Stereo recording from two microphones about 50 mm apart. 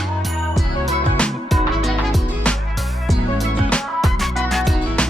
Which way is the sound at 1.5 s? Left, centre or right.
Centre.